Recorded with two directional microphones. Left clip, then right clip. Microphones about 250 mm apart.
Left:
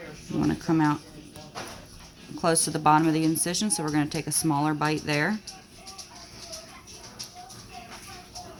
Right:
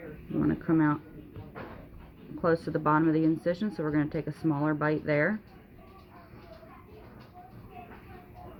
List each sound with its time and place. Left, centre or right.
0.3 s speech: left
2.4 s speech: left